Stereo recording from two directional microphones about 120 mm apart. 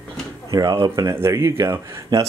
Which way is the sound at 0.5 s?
35° right (ahead or behind).